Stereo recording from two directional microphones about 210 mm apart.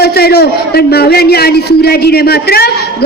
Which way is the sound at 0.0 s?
50° left (ahead or behind).